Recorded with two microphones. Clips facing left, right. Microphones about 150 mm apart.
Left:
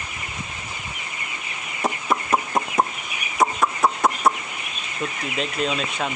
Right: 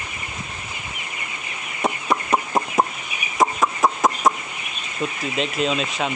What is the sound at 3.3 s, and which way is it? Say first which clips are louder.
Chicken: right 1 dB; centre (ahead or behind).